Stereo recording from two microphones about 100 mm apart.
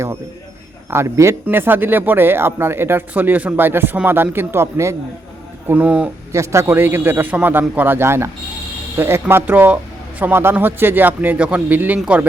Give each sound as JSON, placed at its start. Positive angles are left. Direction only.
{"t": 0.9, "sound": "speech", "side_deg": -25}
{"t": 5.6, "sound": "speech", "side_deg": -15}
{"t": 6.3, "sound": "speech", "side_deg": -30}